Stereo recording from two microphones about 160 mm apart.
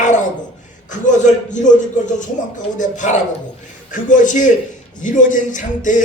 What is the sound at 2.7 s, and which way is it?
A man's voice, 50° left (ahead or behind).